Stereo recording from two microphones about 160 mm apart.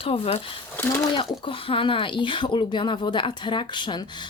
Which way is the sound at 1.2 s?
35° left (ahead or behind).